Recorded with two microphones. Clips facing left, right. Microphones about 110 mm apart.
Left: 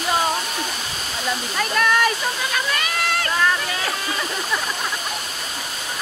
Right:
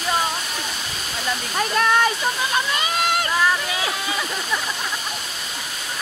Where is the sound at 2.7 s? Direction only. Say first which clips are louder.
Right 2 dB; 20° right (ahead or behind).